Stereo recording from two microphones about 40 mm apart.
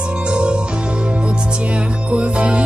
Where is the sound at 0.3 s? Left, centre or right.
Right.